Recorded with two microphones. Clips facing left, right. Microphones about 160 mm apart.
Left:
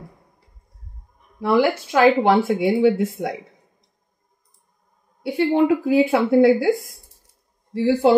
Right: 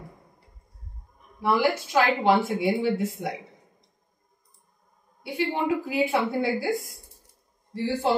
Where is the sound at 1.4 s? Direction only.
65° left (ahead or behind).